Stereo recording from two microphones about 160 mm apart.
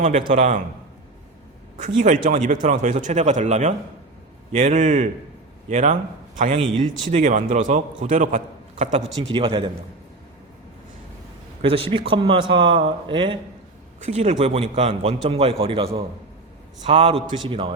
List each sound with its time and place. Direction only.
0.0 s speech: 55° right (ahead or behind)
1.8 s speech: 55° right (ahead or behind)
9.3 s a man's voice: 35° right (ahead or behind)
11.6 s a man's voice: 35° right (ahead or behind)
14.0 s a man's voice: 45° right (ahead or behind)